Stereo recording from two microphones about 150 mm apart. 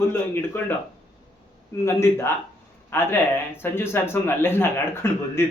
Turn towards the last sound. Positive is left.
turn(degrees=15)  # may be behind; listen again after turning